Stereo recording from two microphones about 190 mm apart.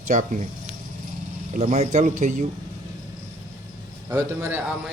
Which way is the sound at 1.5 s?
35° right (ahead or behind).